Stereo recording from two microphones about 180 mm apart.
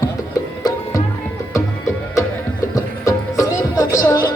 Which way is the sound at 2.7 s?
15° left (ahead or behind).